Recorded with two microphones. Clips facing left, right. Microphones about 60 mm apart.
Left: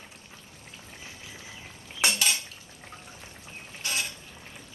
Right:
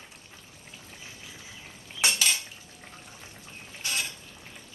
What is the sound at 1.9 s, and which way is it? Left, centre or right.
Cutlery, centre.